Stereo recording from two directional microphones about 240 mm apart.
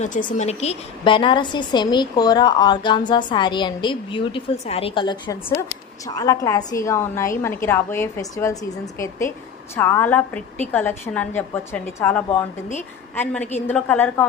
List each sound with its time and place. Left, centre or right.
0.0 s a woman's voice: left; by 12.5 s centre
13.7 s a woman's voice: centre